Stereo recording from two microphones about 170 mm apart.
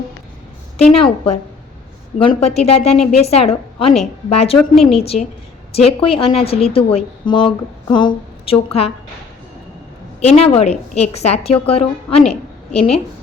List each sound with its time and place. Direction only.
0.9 s a woman's voice: 35° left (ahead or behind)
2.1 s a woman's voice: 30° left (ahead or behind)
4.7 s a woman's voice: centre (ahead or behind)
5.7 s a woman's voice: 35° left (ahead or behind)
10.2 s a woman's voice: 40° left (ahead or behind)
12.3 s a sound: 35° left (ahead or behind)